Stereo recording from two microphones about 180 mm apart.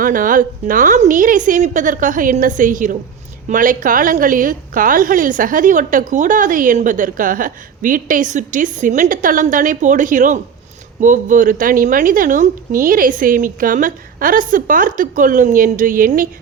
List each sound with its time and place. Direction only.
0.0 s a woman's voice: 50° right (ahead or behind)